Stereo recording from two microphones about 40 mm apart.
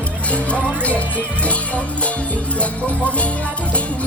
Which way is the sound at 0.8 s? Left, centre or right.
Left.